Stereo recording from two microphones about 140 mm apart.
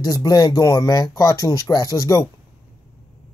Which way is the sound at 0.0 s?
25° left (ahead or behind).